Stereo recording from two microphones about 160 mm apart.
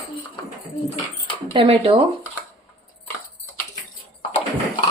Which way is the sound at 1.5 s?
35° right (ahead or behind).